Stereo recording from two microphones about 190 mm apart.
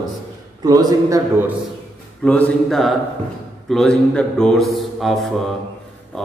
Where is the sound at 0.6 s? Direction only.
20° right (ahead or behind).